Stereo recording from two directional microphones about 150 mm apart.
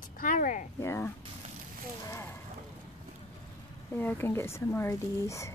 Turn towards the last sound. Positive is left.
turn(degrees=20)  # may be behind; listen again after turning